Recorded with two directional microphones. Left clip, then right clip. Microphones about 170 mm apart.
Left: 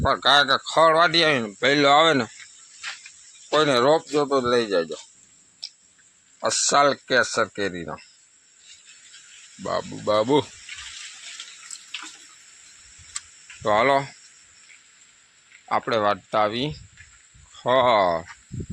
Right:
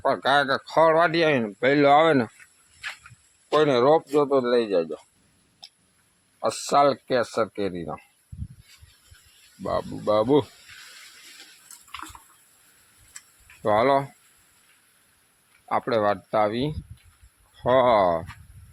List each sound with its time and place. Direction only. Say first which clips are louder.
0.0 s speech: left 3 dB; 15° right (ahead or behind)
3.5 s speech: even; 5° right (ahead or behind)
6.4 s speech: left 1 dB; 10° right (ahead or behind)
9.6 s speech: even; 5° right (ahead or behind)
13.6 s speech: left 1 dB; 10° right (ahead or behind)
15.7 s speech: left 1 dB; 5° right (ahead or behind)
17.6 s speech: even; 15° right (ahead or behind)